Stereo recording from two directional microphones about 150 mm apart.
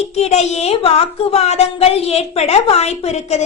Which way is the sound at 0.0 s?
45° left (ahead or behind).